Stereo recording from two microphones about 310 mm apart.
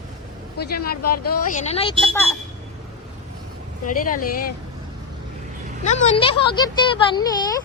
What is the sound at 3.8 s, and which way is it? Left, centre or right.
Speech, left.